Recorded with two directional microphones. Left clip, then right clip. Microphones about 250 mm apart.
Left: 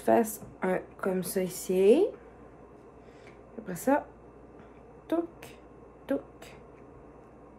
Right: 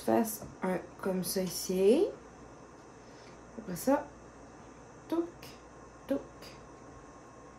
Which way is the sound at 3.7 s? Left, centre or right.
Centre.